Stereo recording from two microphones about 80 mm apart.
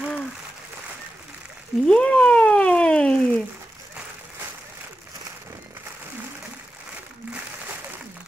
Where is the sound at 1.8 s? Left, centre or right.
Centre.